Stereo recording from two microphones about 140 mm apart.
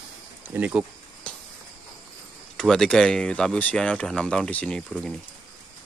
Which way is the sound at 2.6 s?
5° left (ahead or behind).